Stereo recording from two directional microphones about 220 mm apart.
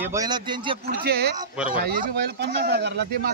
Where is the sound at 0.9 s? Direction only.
50° right (ahead or behind).